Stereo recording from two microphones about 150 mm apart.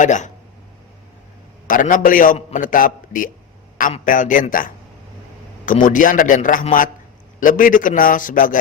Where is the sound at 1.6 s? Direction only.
65° left (ahead or behind).